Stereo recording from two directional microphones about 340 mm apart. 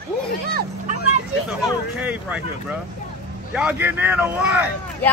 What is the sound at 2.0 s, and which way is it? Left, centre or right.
Speech, centre.